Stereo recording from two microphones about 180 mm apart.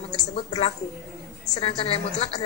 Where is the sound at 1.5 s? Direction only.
30° left (ahead or behind).